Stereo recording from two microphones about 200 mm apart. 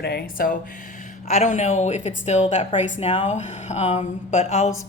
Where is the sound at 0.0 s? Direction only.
55° left (ahead or behind).